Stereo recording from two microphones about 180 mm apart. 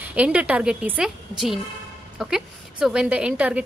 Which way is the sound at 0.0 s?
10° right (ahead or behind).